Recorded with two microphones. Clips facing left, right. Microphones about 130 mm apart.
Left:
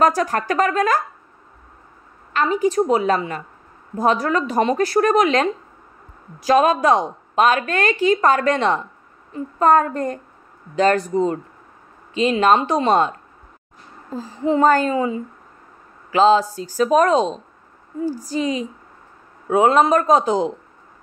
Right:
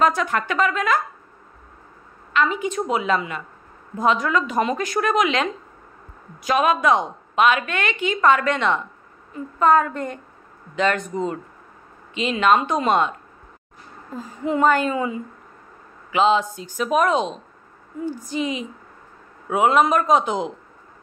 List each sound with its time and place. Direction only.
0.0 s a woman's voice: 40° left (ahead or behind)
2.3 s a woman's voice: 40° left (ahead or behind)
14.1 s a woman's voice: 30° left (ahead or behind)